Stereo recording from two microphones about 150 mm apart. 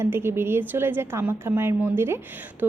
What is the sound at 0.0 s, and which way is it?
A woman's voice, 15° right (ahead or behind).